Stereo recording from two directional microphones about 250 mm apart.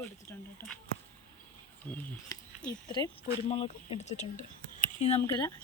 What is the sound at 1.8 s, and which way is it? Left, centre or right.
Speech, centre.